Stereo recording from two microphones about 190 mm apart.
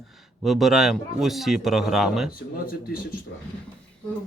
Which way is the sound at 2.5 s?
50° left (ahead or behind).